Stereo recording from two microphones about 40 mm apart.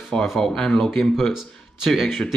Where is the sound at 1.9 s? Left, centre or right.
Centre.